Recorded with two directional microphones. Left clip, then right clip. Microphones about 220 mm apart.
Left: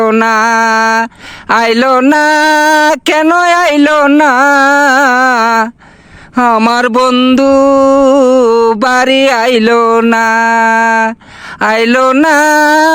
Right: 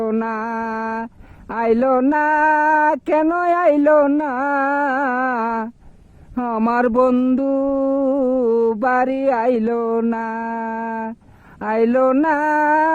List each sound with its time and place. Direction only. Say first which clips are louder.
0.0 s speech: left 14 dB; 10° left (ahead or behind)
7.1 s music: left 10 dB; 5° left (ahead or behind)
7.3 s speech: left 13 dB; 15° left (ahead or behind)
8.4 s mantra: left 9 dB; 30° left (ahead or behind)
8.8 s speech: left 10 dB; 15° left (ahead or behind)
12.5 s mantra: left 9 dB; 20° left (ahead or behind)